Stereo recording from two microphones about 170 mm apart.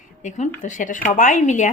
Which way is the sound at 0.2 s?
45° left (ahead or behind).